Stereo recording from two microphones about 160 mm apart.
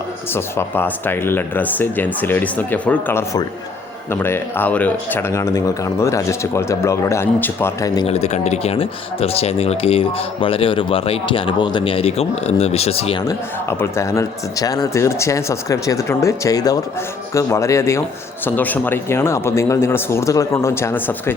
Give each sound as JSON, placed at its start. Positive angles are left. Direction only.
{"t": 0.3, "sound": "speech", "side_deg": 15}
{"t": 8.0, "sound": "speech", "side_deg": 40}
{"t": 13.2, "sound": "speech", "side_deg": 15}